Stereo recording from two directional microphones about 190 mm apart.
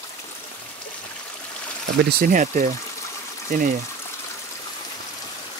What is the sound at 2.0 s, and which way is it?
Speech, 45° right (ahead or behind).